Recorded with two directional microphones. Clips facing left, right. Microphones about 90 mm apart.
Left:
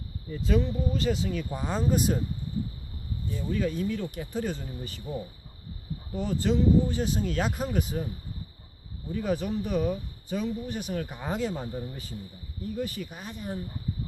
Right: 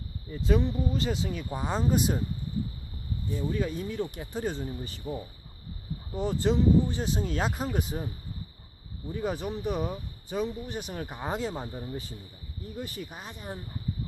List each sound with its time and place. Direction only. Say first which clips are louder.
0.3 s speech: even; 15° right (ahead or behind)
3.3 s speech: left 1 dB; 15° right (ahead or behind)
6.1 s speech: even; 25° right (ahead or behind)
9.1 s speech: left 3 dB; 20° right (ahead or behind)